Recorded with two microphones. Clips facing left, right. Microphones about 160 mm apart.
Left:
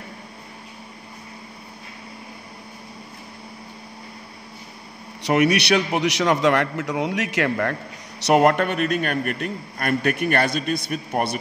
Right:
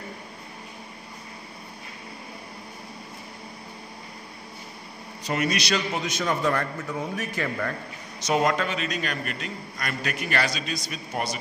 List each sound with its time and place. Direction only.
5.2 s a man's voice: 70° left (ahead or behind)